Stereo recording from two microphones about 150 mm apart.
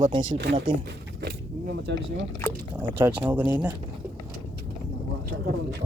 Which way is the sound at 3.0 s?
10° right (ahead or behind).